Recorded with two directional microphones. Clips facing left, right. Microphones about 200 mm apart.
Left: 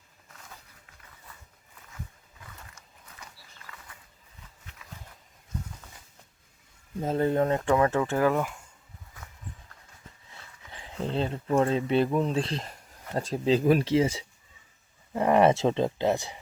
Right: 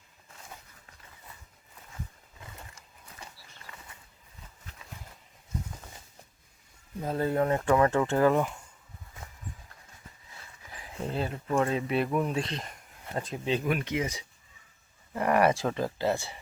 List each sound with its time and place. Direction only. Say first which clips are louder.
0.3 s a sound: right 1 dB; 30° right (ahead or behind)
2.5 s a sound: right 1 dB; 30° right (ahead or behind)
7.0 s speech: left 3 dB; 20° left (ahead or behind)
7.8 s speech: right 1 dB; 15° left (ahead or behind)
8.2 s speech: right 2 dB; centre (ahead or behind)
10.7 s speech: left 3 dB; 25° left (ahead or behind)